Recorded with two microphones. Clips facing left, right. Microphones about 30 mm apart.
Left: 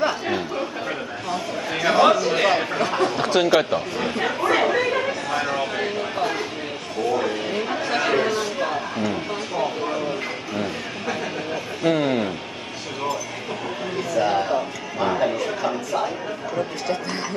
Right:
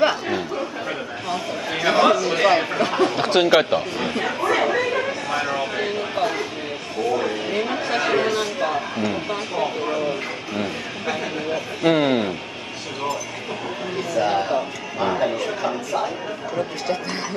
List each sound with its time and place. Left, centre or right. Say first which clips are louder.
0.3 s chatter: even; centre
1.3 s a sound: right 1 dB; centre
2.6 s speech: right 2 dB; centre
3.3 s speech: right 2 dB; centre
3.9 s speech: even; centre
4.2 s chatter: left 1 dB; centre
5.3 s a sound: right 1 dB; centre
7.1 s a sound: even; centre
11.8 s speech: right 2 dB; centre
13.9 s music: even; centre
16.5 s speech: right 1 dB; centre